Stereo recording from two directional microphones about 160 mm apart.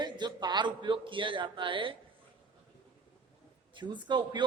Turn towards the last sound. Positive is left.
turn(degrees=-30)  # may be behind; listen again after turning